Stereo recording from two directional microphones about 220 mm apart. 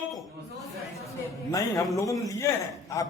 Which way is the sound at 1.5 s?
15° left (ahead or behind).